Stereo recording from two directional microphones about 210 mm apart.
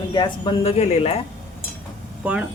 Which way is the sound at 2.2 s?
5° right (ahead or behind).